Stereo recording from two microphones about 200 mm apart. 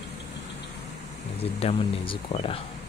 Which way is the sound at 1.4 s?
30° left (ahead or behind).